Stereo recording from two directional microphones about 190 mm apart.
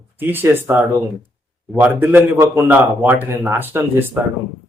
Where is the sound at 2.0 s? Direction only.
10° right (ahead or behind).